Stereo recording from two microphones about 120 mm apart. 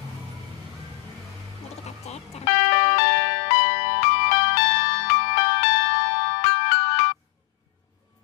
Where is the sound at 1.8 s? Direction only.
60° left (ahead or behind).